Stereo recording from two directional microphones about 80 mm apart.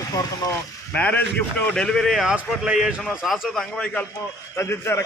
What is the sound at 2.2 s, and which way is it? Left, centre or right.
A man's voice, centre.